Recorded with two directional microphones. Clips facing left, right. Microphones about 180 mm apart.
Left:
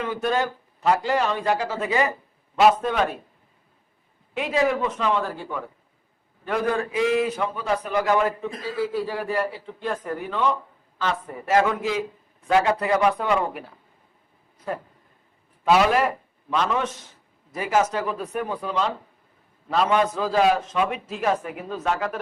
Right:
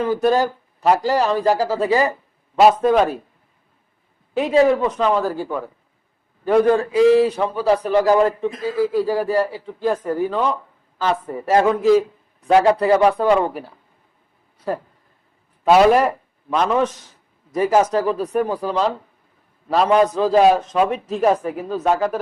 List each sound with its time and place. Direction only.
0.0 s a man's voice: 35° right (ahead or behind)
4.4 s a man's voice: 35° right (ahead or behind)
15.8 s a man's voice: 40° right (ahead or behind)